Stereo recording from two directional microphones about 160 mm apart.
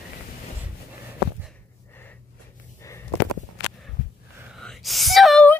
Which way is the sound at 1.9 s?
10° left (ahead or behind).